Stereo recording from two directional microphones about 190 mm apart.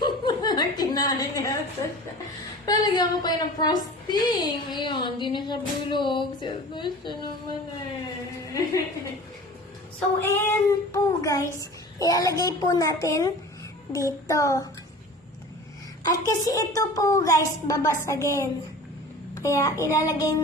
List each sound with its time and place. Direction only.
0.0 s chuckle: 20° left (ahead or behind)
2.6 s a sound: 20° left (ahead or behind)
10.2 s child singing: 10° left (ahead or behind)
13.9 s a woman's voice: 15° left (ahead or behind)
16.0 s a woman's voice: 20° left (ahead or behind)